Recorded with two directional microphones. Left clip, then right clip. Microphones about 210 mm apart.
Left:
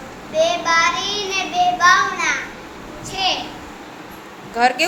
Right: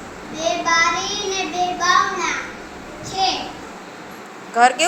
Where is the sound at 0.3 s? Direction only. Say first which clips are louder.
Left 2 dB; 15° left (ahead or behind).